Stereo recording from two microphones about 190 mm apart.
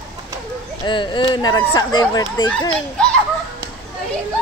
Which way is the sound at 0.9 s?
25° left (ahead or behind).